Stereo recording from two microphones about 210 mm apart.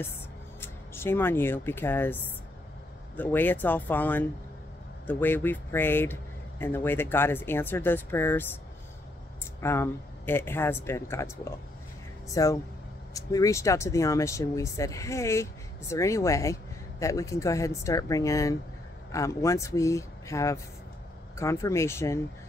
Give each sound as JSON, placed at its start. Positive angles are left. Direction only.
{"t": 0.6, "sound": "speech", "side_deg": 10}
{"t": 9.6, "sound": "speech", "side_deg": 10}